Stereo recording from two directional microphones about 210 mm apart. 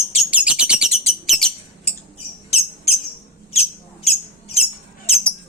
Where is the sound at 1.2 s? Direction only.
Centre (ahead or behind).